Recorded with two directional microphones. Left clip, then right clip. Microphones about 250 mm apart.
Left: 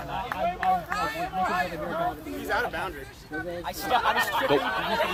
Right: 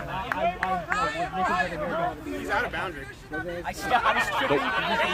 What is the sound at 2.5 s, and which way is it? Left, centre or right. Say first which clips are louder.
Speech: even; centre.